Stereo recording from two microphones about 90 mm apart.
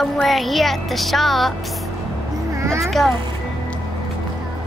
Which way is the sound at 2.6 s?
30° right (ahead or behind).